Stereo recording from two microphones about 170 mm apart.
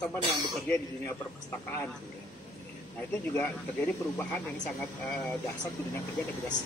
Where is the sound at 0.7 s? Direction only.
15° left (ahead or behind).